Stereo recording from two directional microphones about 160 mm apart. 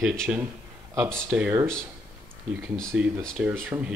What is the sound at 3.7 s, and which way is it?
Speech, 20° right (ahead or behind).